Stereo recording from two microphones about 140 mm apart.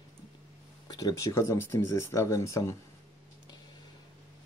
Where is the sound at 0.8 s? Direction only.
25° left (ahead or behind).